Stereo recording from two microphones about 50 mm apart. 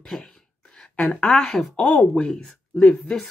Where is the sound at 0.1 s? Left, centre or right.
Centre.